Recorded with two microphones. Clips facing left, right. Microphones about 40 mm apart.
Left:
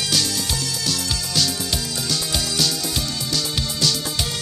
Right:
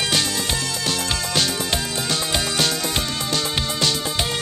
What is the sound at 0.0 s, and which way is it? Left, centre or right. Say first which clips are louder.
Music: right 2 dB; right.